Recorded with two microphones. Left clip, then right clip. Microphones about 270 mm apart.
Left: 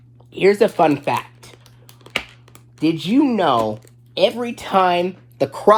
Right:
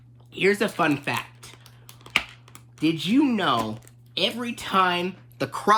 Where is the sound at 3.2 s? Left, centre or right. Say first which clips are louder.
Left 8 dB; centre.